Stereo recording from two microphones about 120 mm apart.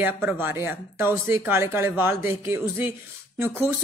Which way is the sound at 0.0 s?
15° right (ahead or behind).